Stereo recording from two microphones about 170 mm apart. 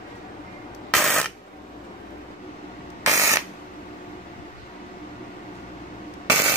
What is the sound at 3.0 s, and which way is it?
Ratchet, 20° right (ahead or behind).